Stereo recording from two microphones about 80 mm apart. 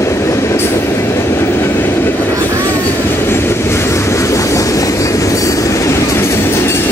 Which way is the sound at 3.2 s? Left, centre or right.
Left.